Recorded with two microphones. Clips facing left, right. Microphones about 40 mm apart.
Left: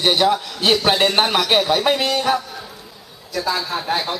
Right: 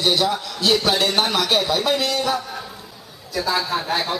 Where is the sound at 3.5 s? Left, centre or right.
Centre.